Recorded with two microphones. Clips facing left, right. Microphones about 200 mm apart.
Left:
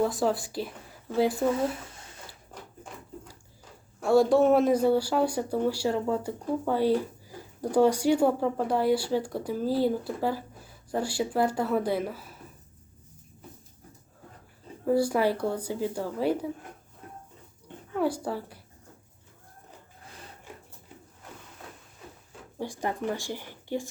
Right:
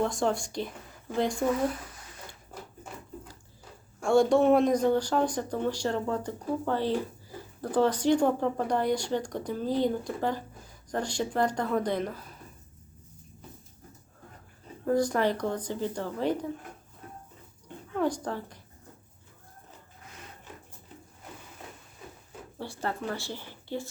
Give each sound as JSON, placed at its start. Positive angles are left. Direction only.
{"t": 0.0, "sound": "speech", "side_deg": 5}
{"t": 1.5, "sound": "speech", "side_deg": 25}
{"t": 2.5, "sound": "a sound", "side_deg": -5}
{"t": 4.0, "sound": "speech", "side_deg": 5}
{"t": 14.8, "sound": "speech", "side_deg": 10}
{"t": 17.9, "sound": "speech", "side_deg": 10}
{"t": 22.5, "sound": "speech", "side_deg": 15}